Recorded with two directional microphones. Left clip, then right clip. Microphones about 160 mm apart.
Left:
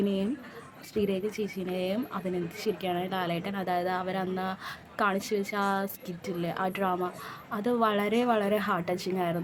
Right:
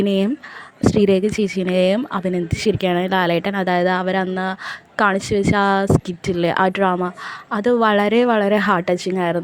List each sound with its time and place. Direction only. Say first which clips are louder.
0.0 s speech: right 11 dB; 55° right (ahead or behind)